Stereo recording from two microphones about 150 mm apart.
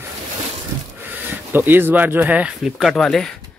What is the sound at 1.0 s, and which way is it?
Speech, 15° right (ahead or behind).